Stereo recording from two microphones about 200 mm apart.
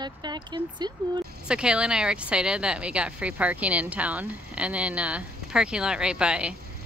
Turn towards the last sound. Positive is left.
turn(degrees=-5)  # may be behind; listen again after turning